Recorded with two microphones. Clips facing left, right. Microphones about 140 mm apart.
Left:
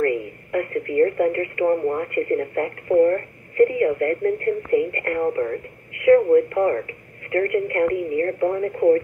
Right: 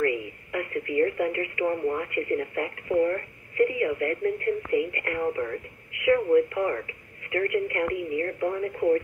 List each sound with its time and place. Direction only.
0.0 s speech: 45° left (ahead or behind)